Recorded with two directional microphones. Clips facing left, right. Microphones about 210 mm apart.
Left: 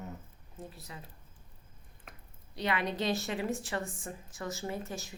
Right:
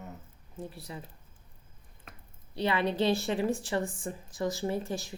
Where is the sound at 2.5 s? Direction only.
30° right (ahead or behind).